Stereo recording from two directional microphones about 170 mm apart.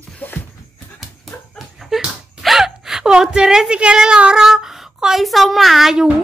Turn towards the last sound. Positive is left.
turn(degrees=-5)  # may be behind; listen again after turning